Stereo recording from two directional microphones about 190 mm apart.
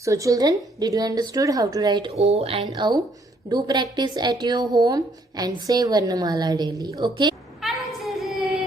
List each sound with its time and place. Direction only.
0.0 s a woman's voice: 15° right (ahead or behind)
7.6 s child singing: centre (ahead or behind)